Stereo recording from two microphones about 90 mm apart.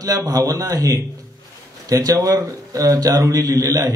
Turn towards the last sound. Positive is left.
turn(degrees=-35)  # may be behind; listen again after turning